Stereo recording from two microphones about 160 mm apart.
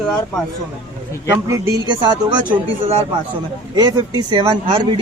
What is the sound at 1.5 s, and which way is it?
Speech, 25° right (ahead or behind).